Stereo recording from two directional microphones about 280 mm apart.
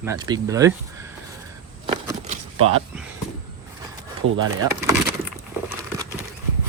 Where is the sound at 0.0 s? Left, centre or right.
Centre.